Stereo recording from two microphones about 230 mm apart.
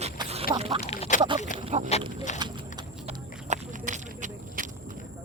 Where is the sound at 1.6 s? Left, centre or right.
Right.